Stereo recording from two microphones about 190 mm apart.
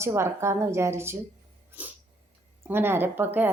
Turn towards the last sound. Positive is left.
turn(degrees=-10)  # may be behind; listen again after turning